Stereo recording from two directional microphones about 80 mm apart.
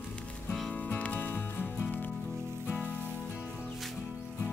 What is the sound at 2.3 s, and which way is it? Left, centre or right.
Music, right.